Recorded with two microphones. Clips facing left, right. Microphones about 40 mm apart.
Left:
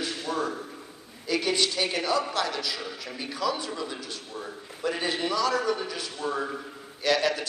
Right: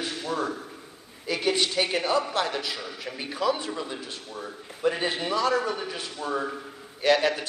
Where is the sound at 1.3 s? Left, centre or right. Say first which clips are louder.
Even; centre.